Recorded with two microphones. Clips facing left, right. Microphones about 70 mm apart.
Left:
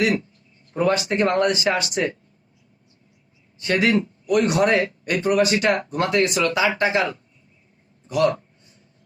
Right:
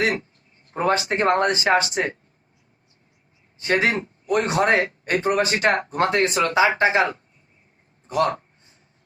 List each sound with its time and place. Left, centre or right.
0.0 s a man's voice: right
3.6 s speech: right
8.0 s a sound: right